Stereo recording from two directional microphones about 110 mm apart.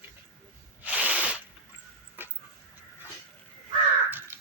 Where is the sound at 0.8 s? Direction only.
10° right (ahead or behind).